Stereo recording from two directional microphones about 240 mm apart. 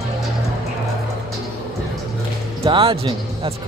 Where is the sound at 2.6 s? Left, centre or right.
Right.